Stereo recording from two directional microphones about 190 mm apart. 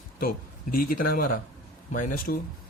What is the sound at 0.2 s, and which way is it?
Speech, 50° left (ahead or behind).